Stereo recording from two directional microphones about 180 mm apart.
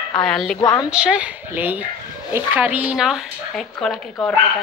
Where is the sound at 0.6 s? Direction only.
25° left (ahead or behind).